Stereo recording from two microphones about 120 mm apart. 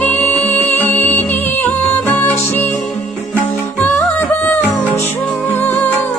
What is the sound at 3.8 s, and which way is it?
Music, 15° left (ahead or behind).